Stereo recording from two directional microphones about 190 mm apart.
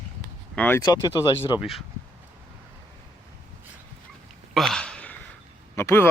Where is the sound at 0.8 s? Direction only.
20° left (ahead or behind).